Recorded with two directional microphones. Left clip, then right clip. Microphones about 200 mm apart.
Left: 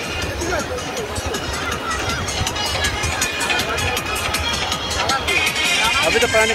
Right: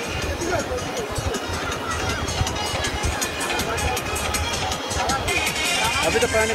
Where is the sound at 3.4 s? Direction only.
40° right (ahead or behind).